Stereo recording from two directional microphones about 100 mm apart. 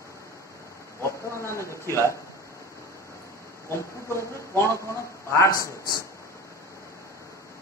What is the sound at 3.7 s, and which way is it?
Speech, 30° left (ahead or behind).